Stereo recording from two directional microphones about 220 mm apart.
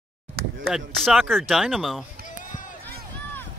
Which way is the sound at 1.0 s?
Centre (ahead or behind).